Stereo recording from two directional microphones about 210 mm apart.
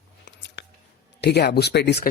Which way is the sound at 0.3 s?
55° left (ahead or behind).